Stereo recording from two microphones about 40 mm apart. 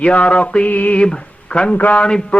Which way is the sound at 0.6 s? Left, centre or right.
Left.